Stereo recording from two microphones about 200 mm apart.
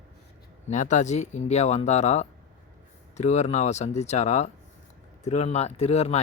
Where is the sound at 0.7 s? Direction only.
35° left (ahead or behind).